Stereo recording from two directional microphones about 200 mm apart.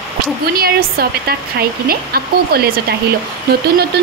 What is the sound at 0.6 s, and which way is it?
A woman's voice, 50° right (ahead or behind).